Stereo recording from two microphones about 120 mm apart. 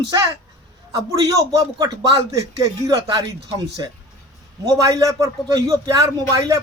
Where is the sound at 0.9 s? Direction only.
30° right (ahead or behind).